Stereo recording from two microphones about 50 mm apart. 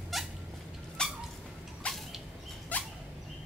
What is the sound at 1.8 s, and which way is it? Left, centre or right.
Vehicle, left.